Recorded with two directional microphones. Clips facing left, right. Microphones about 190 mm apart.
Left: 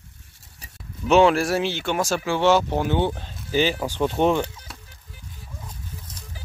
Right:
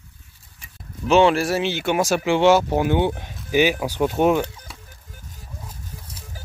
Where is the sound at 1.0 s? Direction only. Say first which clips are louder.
Even; centre (ahead or behind).